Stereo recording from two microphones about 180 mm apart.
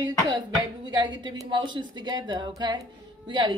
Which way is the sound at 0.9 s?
25° right (ahead or behind).